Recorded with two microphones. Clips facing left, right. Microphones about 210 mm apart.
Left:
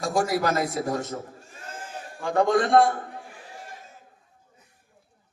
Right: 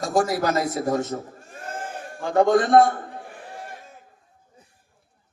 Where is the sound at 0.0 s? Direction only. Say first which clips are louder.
Right 2 dB; 25° right (ahead or behind).